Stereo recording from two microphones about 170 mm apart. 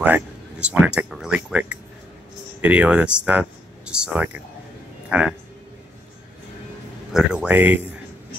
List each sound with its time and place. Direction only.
0.0 s speech: 10° right (ahead or behind)
7.1 s speech: 5° right (ahead or behind)